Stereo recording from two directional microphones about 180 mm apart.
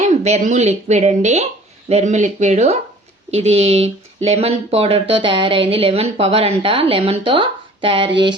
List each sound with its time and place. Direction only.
0.0 s speech: 40° right (ahead or behind)